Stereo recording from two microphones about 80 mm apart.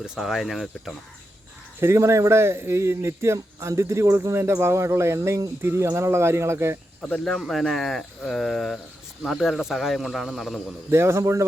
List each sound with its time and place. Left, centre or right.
0.0 s speech: centre
1.8 s speech: right
7.0 s speech: centre
10.9 s speech: right